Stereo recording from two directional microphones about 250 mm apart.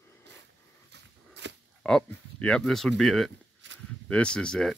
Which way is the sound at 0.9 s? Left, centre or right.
Right.